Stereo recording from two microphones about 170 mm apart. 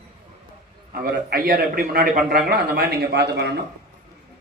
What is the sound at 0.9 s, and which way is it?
A man's voice, 60° right (ahead or behind).